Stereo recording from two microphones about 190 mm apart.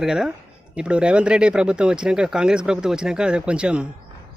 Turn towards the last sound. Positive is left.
turn(degrees=-5)  # may be behind; listen again after turning